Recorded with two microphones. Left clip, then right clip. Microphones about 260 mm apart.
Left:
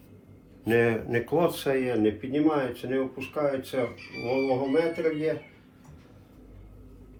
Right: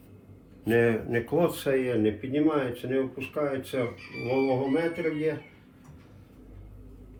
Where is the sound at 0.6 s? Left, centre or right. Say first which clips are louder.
Even; centre.